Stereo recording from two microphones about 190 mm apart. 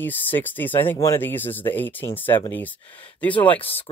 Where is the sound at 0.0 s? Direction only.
10° left (ahead or behind).